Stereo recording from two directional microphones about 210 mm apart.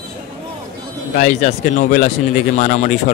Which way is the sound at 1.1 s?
35° left (ahead or behind).